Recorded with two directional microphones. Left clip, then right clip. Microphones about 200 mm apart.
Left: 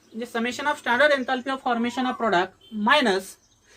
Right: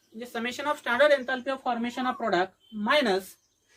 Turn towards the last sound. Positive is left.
turn(degrees=-15)  # may be behind; listen again after turning